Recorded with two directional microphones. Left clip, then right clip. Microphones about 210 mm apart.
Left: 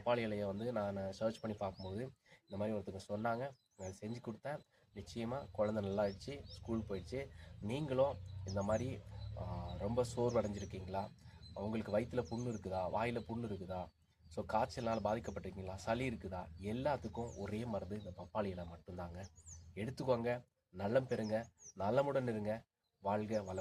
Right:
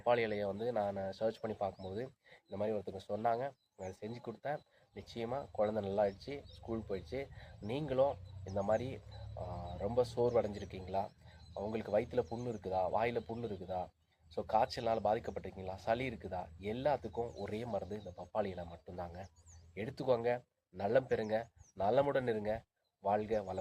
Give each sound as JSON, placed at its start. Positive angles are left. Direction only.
{"t": 0.0, "sound": "speech", "side_deg": 5}